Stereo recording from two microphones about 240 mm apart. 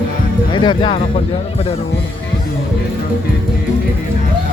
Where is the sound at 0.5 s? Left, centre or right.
Centre.